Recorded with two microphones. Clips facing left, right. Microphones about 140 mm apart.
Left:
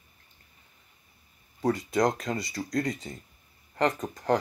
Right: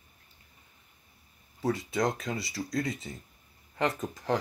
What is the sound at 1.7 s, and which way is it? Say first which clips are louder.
Speech: left 4 dB; centre (ahead or behind).